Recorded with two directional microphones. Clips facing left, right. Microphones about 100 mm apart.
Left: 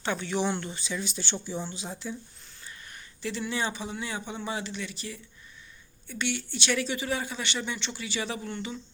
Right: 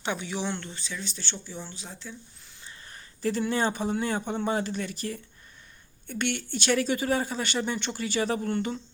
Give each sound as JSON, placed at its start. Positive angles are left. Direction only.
{"t": 0.0, "sound": "speech", "side_deg": -15}
{"t": 0.3, "sound": "speech", "side_deg": 0}
{"t": 3.2, "sound": "speech", "side_deg": -45}